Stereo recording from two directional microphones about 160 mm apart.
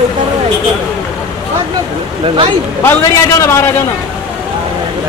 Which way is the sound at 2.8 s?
15° left (ahead or behind).